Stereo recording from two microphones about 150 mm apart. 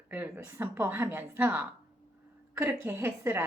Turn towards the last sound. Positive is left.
turn(degrees=-15)  # may be behind; listen again after turning